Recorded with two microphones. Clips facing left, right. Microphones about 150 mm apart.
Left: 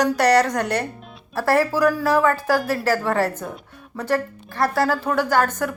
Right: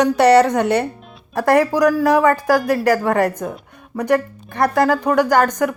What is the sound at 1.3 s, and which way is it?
Speech, 15° right (ahead or behind).